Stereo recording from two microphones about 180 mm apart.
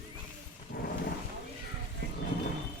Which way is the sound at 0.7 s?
55° left (ahead or behind).